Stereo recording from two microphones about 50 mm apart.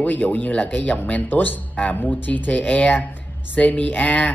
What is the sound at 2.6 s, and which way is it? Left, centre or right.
Speech, left.